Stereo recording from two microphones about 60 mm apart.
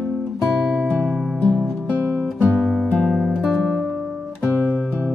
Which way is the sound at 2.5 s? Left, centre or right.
Centre.